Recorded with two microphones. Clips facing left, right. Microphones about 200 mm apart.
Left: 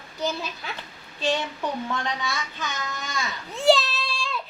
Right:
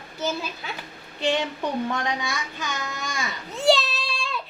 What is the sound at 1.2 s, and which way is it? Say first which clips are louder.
Child singing: right 2 dB; 15° right (ahead or behind).